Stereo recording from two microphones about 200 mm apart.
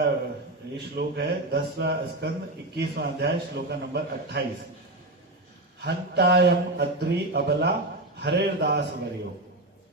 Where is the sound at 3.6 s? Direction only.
55° right (ahead or behind).